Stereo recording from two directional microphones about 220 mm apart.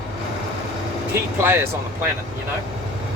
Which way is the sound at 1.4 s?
10° right (ahead or behind).